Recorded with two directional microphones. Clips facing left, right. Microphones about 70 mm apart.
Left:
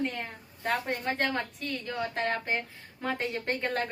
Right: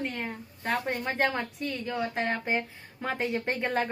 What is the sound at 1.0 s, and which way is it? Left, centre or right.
Speech, centre.